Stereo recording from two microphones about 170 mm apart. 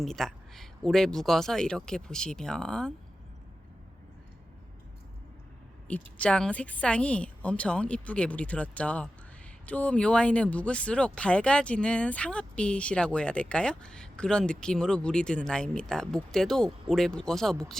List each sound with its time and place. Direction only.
0.0 s speech: centre (ahead or behind)
5.9 s a woman's voice: 5° left (ahead or behind)